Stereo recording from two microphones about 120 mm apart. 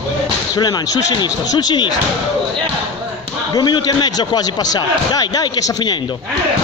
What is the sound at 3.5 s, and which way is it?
Speech, 35° left (ahead or behind).